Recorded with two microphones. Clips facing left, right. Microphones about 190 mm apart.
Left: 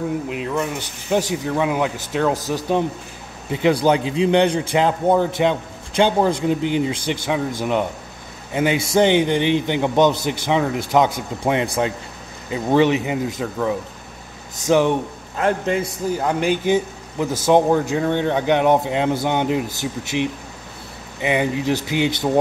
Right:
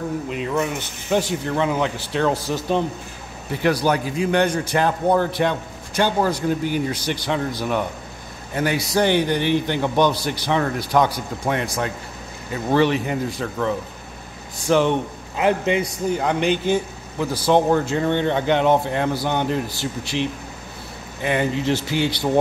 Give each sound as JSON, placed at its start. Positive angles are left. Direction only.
{"t": 0.3, "sound": "a man's voice", "side_deg": 0}
{"t": 3.5, "sound": "a man's voice", "side_deg": 20}
{"t": 8.5, "sound": "a man's voice", "side_deg": 20}
{"t": 11.6, "sound": "speech", "side_deg": 30}
{"t": 12.5, "sound": "a man's voice", "side_deg": 15}
{"t": 15.3, "sound": "a man's voice", "side_deg": -5}